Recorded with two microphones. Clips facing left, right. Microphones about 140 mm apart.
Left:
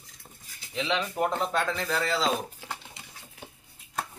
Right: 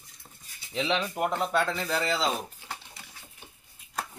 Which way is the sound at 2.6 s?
90° left.